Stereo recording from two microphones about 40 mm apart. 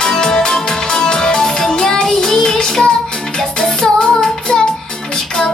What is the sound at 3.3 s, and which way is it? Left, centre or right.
Music, centre.